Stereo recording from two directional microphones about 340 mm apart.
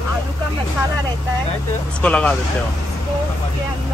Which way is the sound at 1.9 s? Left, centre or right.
Centre.